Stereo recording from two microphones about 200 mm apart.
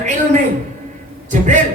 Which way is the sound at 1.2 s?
40° right (ahead or behind).